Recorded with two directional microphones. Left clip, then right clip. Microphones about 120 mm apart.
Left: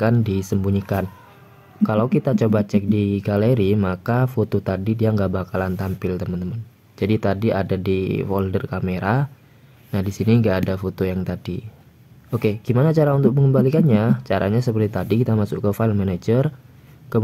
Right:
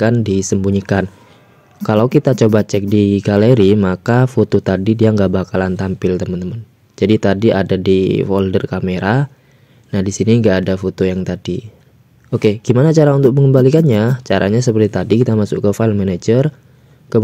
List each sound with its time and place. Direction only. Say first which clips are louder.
0.0 s a man's voice: right 6 dB; 25° right (ahead or behind)